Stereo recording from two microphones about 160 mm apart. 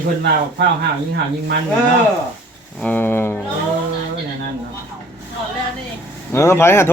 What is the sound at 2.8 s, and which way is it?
Speech, 10° left (ahead or behind).